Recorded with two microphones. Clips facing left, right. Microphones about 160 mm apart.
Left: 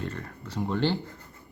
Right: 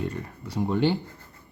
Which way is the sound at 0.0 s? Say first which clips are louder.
Right 4 dB; 15° right (ahead or behind).